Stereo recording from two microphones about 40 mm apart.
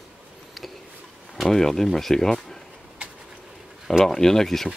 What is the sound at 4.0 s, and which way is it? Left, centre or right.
Speech, centre.